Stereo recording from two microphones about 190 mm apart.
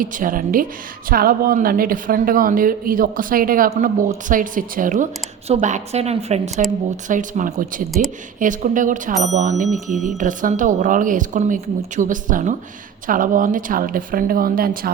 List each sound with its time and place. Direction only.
0.0 s a woman's voice: 45° right (ahead or behind)
9.6 s speech: centre (ahead or behind)
10.2 s speech: 45° right (ahead or behind)